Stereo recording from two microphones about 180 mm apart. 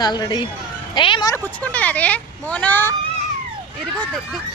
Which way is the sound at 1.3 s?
10° left (ahead or behind).